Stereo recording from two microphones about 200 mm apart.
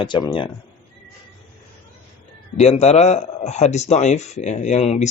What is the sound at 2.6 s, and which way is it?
A man's voice, 35° left (ahead or behind).